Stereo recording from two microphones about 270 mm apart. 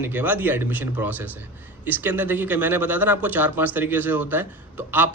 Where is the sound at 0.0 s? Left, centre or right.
Centre.